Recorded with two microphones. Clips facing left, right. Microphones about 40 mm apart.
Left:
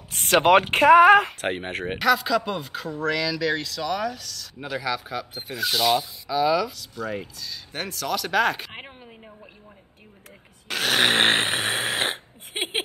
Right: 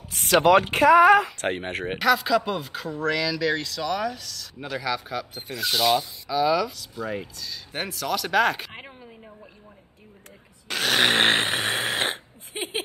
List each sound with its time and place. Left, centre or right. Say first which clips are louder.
0.3 s speech: even; left
1.4 s speech: even; centre
10.7 s snoring: even; centre
12.5 s a sound: left 2 dB; left